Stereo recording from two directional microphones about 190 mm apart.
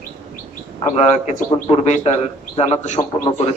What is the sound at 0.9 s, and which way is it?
A man's voice, 35° left (ahead or behind).